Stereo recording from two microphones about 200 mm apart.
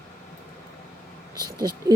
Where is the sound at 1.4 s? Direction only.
20° right (ahead or behind).